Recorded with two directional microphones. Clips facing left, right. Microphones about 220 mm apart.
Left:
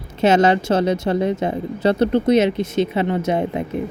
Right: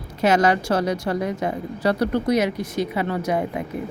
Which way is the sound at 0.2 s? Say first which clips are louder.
Left 3 dB; 25° left (ahead or behind).